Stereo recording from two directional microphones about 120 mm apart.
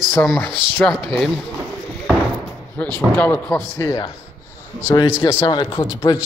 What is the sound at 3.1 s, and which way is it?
Speech, 15° left (ahead or behind).